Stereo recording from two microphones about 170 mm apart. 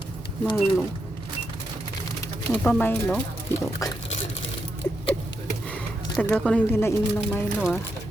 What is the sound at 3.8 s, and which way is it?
Speech, 20° left (ahead or behind).